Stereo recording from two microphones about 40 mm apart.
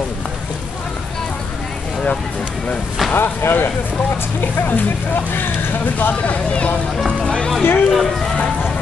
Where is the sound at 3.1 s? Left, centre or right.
Left.